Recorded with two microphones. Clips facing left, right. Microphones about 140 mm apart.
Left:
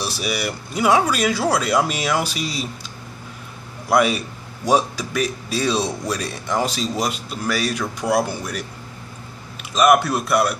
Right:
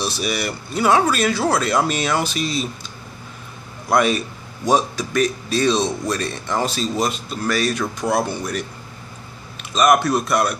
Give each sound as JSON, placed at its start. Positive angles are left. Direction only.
{"t": 0.0, "sound": "a man's voice", "side_deg": 10}
{"t": 3.9, "sound": "a man's voice", "side_deg": 10}
{"t": 9.8, "sound": "a man's voice", "side_deg": 10}